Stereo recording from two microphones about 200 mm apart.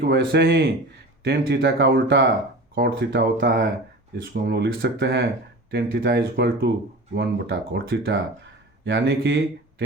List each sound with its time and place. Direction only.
0.1 s speech: 55° right (ahead or behind)